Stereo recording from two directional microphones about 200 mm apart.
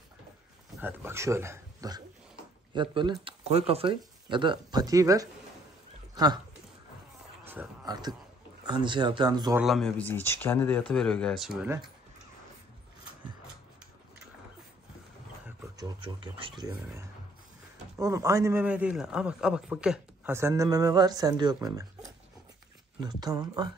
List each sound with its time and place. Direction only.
0.7 s speech: 10° right (ahead or behind)
7.4 s a sound: 10° right (ahead or behind)
7.8 s a man's voice: 20° right (ahead or behind)
9.6 s speech: centre (ahead or behind)
15.8 s a man's voice: 25° right (ahead or behind)